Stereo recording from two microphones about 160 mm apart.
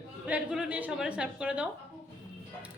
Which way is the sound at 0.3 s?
5° right (ahead or behind).